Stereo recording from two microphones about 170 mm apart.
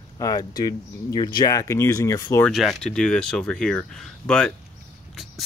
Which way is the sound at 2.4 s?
5° left (ahead or behind).